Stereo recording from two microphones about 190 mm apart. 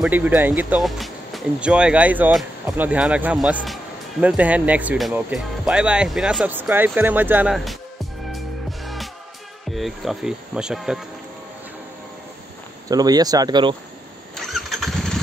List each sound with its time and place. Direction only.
0.0 s speech: 10° right (ahead or behind)
8.8 s music: centre (ahead or behind)
9.7 s speech: centre (ahead or behind)
12.8 s speech: 20° right (ahead or behind)
14.3 s engine starting: centre (ahead or behind)